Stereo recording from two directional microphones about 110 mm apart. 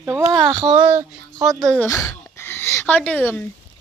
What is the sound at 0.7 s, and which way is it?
Speech, 65° right (ahead or behind).